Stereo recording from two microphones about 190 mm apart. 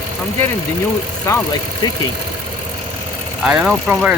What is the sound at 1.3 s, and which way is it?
Speech, 15° left (ahead or behind).